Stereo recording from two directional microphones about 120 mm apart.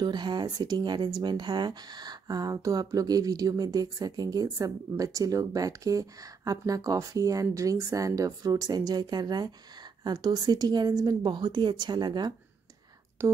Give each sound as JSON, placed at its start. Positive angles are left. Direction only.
{"t": 0.0, "sound": "speech", "side_deg": -40}
{"t": 13.2, "sound": "speech", "side_deg": -25}